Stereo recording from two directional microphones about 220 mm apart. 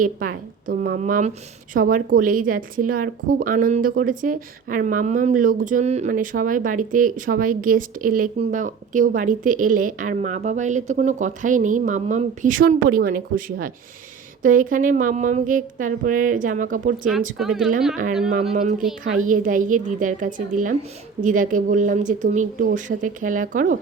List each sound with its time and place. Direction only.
0.0 s a woman's voice: 40° right (ahead or behind)
17.3 s speech: centre (ahead or behind)
19.1 s a woman's voice: 35° right (ahead or behind)